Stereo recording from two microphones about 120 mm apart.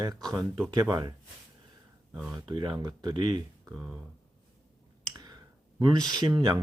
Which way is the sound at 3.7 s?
10° right (ahead or behind).